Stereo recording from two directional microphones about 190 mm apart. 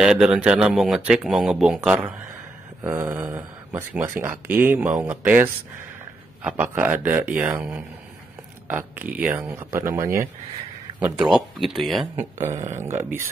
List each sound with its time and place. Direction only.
0.0 s speech: 5° right (ahead or behind)
11.2 s speech: centre (ahead or behind)
12.4 s a sound: 40° right (ahead or behind)
12.8 s speech: 10° right (ahead or behind)